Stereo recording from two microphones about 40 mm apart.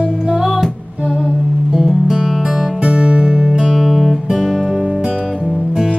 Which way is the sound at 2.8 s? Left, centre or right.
Right.